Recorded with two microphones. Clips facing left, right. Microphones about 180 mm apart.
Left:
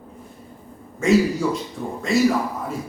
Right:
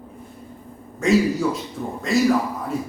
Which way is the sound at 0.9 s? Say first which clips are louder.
Left 1 dB; centre (ahead or behind).